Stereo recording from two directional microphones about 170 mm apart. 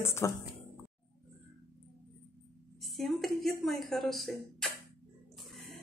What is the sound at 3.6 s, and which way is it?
A woman's voice, centre (ahead or behind).